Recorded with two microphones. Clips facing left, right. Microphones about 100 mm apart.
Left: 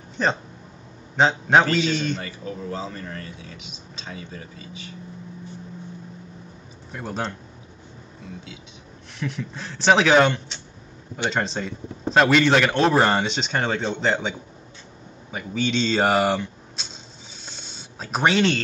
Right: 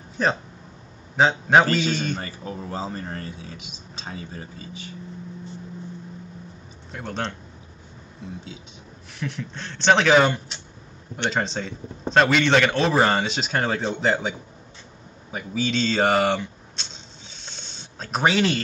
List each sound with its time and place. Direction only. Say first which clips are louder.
1.1 s a man's voice: even; centre (ahead or behind)
2.1 s speech: even; 35° right (ahead or behind)
6.9 s a man's voice: left 1 dB; 5° left (ahead or behind)
9.2 s a man's voice: left 1 dB; centre (ahead or behind)
15.3 s a man's voice: left 1 dB; centre (ahead or behind)
17.4 s a sound: left 1 dB; 5° left (ahead or behind)